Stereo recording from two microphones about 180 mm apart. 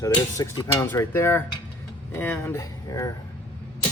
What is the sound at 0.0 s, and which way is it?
Cutlery, 20° left (ahead or behind).